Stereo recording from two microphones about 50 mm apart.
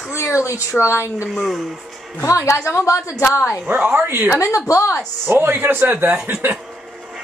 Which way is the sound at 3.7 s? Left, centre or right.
Right.